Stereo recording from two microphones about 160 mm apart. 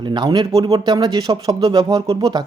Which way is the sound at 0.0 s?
30° right (ahead or behind).